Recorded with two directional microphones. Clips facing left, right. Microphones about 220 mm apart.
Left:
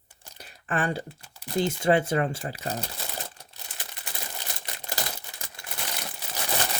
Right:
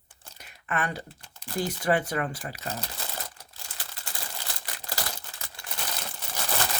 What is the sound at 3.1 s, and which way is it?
Crumpling, 20° left (ahead or behind).